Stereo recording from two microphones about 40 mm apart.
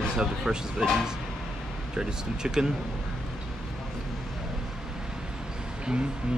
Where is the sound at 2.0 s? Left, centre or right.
Centre.